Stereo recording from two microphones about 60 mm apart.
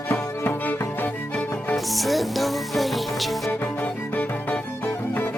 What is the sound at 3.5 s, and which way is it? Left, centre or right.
Music, left.